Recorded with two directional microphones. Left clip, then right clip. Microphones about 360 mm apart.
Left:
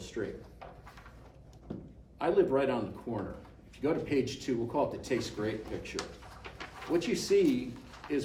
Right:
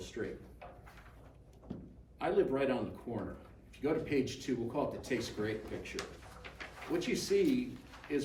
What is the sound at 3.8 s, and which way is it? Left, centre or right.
Speech, centre.